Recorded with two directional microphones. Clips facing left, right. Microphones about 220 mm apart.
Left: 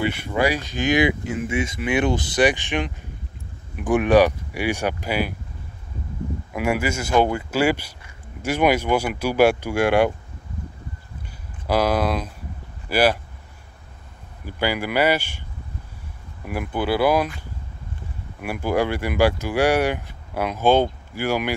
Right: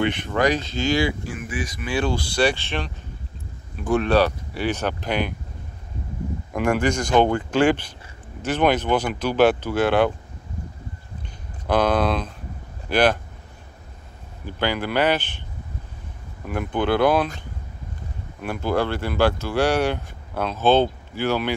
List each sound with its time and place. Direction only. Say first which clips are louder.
0.0 s speech: right 1 dB; 10° left (ahead or behind)
6.5 s speech: right 2 dB; 5° left (ahead or behind)
11.6 s speech: right 1 dB; 10° left (ahead or behind)
14.4 s speech: even; 10° left (ahead or behind)
16.4 s speech: right 1 dB; 5° left (ahead or behind)
18.4 s speech: left 1 dB; 10° left (ahead or behind)